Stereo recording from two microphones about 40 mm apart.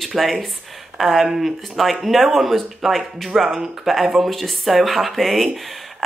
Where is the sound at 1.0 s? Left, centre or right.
Centre.